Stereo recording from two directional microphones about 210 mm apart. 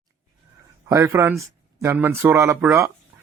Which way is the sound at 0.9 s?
15° right (ahead or behind).